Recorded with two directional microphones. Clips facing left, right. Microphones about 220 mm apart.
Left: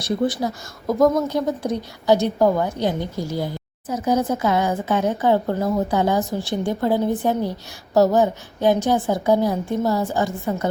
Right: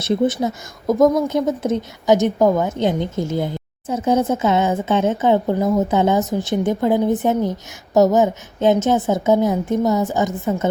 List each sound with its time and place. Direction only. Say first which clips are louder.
0.0 s a woman's voice: right 3 dB; 20° right (ahead or behind)